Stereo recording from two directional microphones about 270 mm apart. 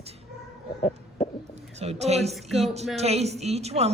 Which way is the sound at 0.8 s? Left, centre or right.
Left.